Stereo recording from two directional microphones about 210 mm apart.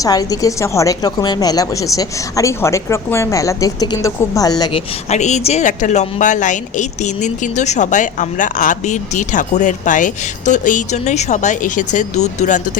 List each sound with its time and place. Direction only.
0.0 s a woman's voice: 15° left (ahead or behind)
5.0 s a woman's voice: 35° left (ahead or behind)